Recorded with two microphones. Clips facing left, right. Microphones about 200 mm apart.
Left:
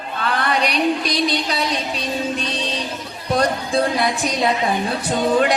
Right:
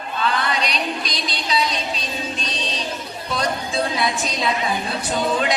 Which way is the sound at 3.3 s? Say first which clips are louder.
Left 6 dB; 60° left (ahead or behind).